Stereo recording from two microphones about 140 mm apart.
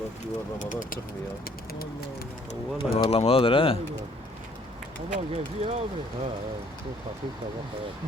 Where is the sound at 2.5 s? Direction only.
40° left (ahead or behind).